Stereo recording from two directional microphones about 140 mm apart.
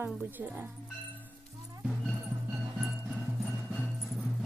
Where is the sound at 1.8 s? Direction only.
Centre (ahead or behind).